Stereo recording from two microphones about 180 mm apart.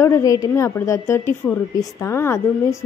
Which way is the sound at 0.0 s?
20° left (ahead or behind).